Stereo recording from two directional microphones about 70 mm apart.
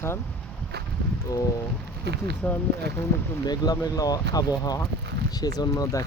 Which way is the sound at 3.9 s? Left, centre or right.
Left.